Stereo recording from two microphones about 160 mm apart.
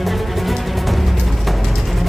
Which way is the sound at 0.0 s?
Centre (ahead or behind).